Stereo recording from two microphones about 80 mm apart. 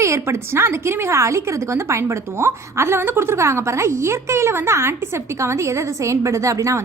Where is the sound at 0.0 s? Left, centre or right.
Right.